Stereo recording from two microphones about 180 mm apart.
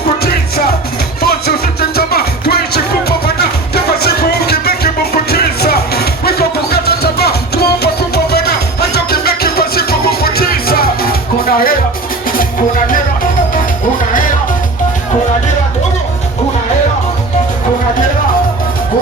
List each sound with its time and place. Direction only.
1.2 s music: 60° left (ahead or behind)